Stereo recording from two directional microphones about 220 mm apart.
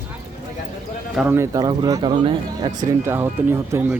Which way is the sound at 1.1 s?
10° right (ahead or behind).